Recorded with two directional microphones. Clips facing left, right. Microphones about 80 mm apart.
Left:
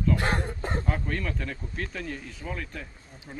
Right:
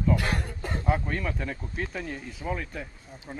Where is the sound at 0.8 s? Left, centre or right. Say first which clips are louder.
Right 6 dB; centre.